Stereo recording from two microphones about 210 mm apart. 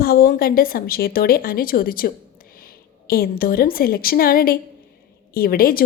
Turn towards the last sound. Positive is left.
turn(degrees=45)  # may be behind; listen again after turning